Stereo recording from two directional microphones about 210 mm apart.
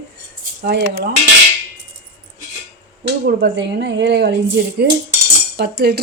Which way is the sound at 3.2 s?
50° right (ahead or behind).